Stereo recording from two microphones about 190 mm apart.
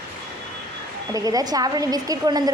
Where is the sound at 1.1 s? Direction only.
20° right (ahead or behind).